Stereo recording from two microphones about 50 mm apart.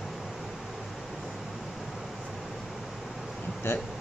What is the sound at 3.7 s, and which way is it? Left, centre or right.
Speech, left.